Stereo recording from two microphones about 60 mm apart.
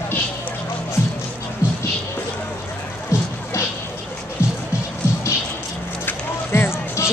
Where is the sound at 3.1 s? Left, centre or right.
Left.